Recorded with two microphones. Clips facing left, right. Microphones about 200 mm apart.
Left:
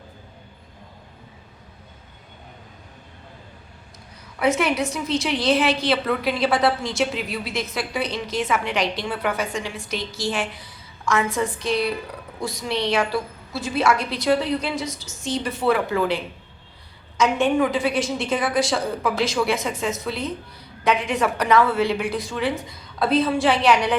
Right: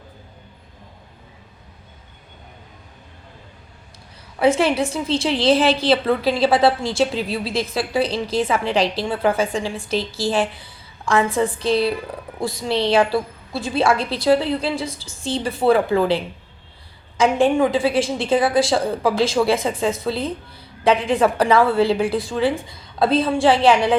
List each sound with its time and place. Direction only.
4.4 s a woman's voice: 30° right (ahead or behind)